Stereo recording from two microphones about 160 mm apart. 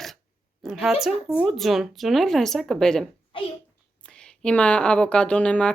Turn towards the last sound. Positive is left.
turn(degrees=5)  # may be behind; listen again after turning